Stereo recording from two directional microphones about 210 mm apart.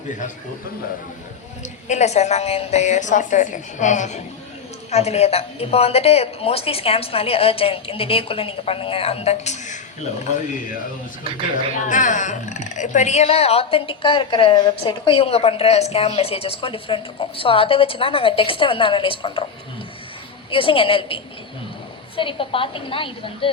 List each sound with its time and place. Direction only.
1.6 s a woman's voice: 35° left (ahead or behind)
11.9 s speech: 35° left (ahead or behind)
20.5 s speech: 25° left (ahead or behind)